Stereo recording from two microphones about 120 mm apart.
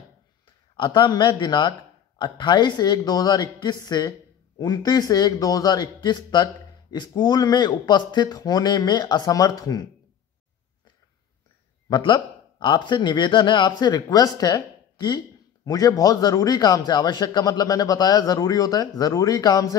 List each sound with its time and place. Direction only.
0.7 s speech: 40° left (ahead or behind)
11.9 s speech: 40° left (ahead or behind)